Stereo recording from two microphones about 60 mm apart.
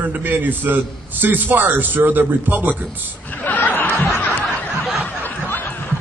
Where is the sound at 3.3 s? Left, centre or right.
Left.